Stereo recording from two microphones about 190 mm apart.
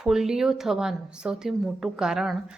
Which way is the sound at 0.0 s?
Centre (ahead or behind).